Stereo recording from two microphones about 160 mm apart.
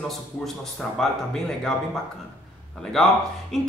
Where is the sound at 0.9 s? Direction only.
5° left (ahead or behind).